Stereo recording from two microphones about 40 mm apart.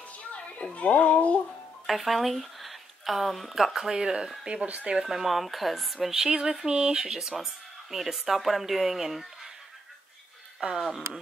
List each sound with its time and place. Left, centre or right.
0.7 s speech: left
1.9 s speech: centre
3.9 s speech: centre
4.6 s speech: right
5.0 s speech: centre
7.1 s speech: centre
10.6 s speech: centre